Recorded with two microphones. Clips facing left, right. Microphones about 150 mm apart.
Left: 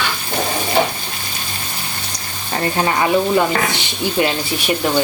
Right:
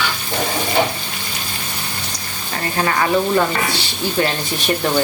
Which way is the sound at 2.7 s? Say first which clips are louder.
Even; 20° left (ahead or behind).